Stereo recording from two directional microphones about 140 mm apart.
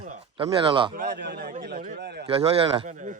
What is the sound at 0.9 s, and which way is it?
A man's voice, 90° right.